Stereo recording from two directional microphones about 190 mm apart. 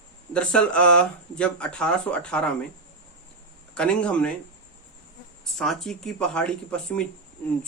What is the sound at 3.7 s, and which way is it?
Speech, 5° left (ahead or behind).